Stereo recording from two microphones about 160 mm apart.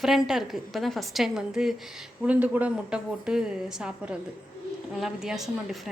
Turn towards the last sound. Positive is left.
turn(degrees=0)  # may be behind; listen again after turning